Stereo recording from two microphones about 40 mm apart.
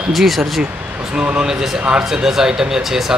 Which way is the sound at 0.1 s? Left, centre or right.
Centre.